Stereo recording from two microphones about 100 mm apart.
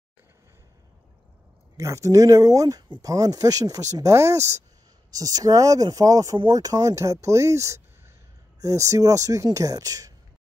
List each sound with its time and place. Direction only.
1.8 s speech: 30° right (ahead or behind)